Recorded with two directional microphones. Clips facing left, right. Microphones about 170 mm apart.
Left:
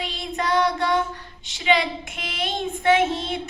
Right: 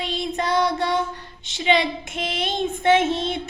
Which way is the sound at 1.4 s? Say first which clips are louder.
Right 1 dB; 25° right (ahead or behind).